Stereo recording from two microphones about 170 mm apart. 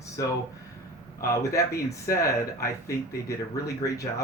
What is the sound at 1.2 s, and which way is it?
Speech, 20° left (ahead or behind).